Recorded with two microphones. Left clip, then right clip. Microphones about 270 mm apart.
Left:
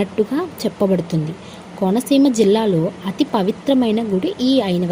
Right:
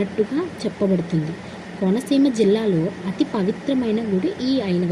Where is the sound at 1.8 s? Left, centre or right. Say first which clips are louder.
Left 4 dB; left.